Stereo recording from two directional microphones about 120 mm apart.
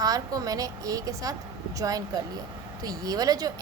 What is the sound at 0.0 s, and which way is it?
Speech, 30° right (ahead or behind).